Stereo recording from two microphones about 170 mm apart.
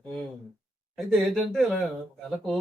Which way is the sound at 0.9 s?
Centre (ahead or behind).